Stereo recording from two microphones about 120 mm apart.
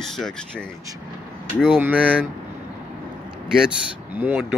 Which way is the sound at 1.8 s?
15° right (ahead or behind).